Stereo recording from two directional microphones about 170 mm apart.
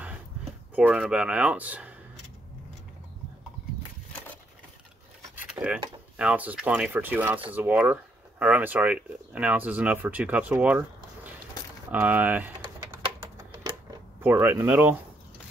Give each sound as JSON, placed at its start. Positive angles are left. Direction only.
{"t": 0.7, "sound": "speech", "side_deg": -10}
{"t": 5.5, "sound": "a sound", "side_deg": -5}
{"t": 6.1, "sound": "speech", "side_deg": -5}
{"t": 13.5, "sound": "typewriter", "side_deg": -25}
{"t": 14.2, "sound": "speech", "side_deg": -10}